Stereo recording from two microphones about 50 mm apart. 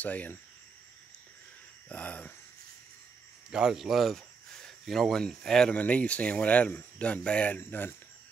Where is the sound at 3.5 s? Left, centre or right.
Centre.